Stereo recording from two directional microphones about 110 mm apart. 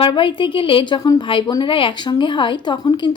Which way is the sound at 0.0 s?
50° left (ahead or behind).